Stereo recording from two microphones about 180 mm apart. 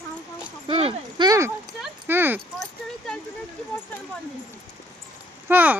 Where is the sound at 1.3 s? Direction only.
15° right (ahead or behind).